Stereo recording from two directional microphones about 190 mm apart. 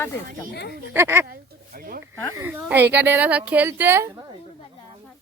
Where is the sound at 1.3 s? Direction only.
50° right (ahead or behind).